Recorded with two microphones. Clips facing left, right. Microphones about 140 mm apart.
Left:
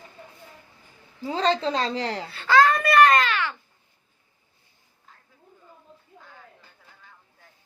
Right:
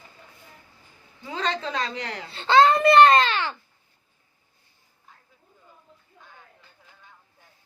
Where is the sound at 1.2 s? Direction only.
35° left (ahead or behind).